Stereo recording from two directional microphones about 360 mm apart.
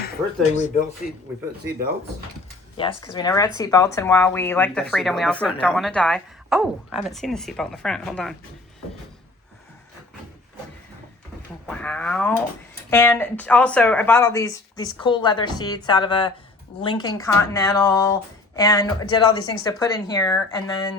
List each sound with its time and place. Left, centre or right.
0.0 s speech: left
2.7 s speech: centre
11.6 s speech: centre